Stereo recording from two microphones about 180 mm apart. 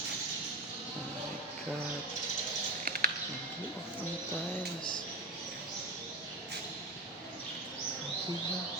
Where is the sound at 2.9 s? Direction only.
55° right (ahead or behind).